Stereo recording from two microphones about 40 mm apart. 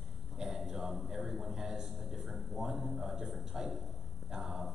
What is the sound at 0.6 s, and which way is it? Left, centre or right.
A man's voice, centre.